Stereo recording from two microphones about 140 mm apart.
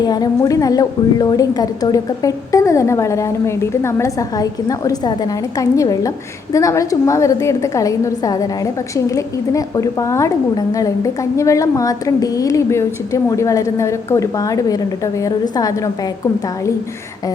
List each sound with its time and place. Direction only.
0.0 s a woman's voice: 25° left (ahead or behind)